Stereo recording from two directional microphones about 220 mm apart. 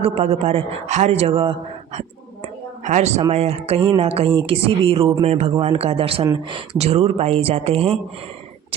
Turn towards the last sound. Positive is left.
turn(degrees=-25)  # may be behind; listen again after turning